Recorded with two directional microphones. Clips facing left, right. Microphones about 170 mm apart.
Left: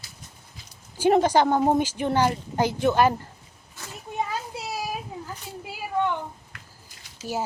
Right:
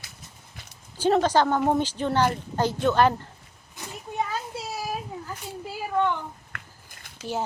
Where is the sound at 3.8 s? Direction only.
15° right (ahead or behind).